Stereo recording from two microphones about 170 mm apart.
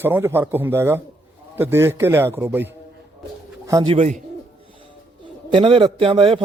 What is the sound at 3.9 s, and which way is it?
Speech, 40° right (ahead or behind).